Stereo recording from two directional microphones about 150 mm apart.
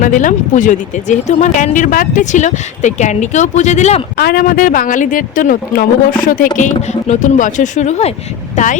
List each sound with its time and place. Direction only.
0.0 s speech: 60° left (ahead or behind)
4.2 s speech: 90° left; by 8.7 s 50° left (ahead or behind)